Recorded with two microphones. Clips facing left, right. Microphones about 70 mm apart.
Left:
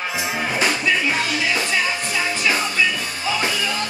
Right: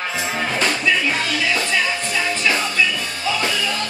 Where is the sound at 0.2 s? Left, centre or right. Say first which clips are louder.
Even; centre.